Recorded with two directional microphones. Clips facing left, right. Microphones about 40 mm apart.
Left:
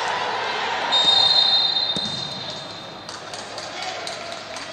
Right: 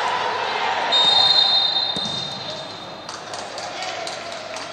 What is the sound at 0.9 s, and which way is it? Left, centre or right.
Basketball bounce, right.